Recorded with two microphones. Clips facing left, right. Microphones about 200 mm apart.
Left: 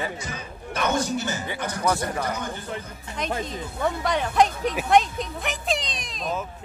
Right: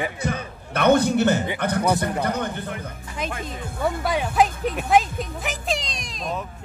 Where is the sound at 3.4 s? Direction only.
5° right (ahead or behind).